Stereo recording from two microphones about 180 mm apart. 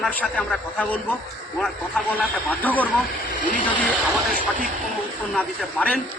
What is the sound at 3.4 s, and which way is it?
Speech, 45° left (ahead or behind).